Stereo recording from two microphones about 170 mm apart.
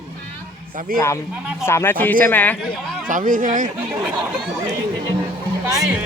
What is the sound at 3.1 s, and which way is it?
Speech, 50° right (ahead or behind).